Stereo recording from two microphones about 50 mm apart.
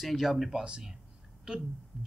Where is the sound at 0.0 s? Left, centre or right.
Centre.